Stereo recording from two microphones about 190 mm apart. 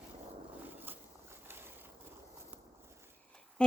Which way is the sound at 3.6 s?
5° left (ahead or behind).